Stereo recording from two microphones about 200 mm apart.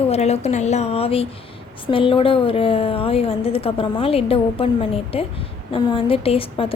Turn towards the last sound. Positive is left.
turn(degrees=25)  # may be behind; listen again after turning